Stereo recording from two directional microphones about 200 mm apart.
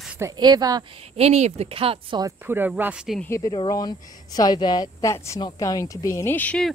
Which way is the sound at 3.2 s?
15° left (ahead or behind).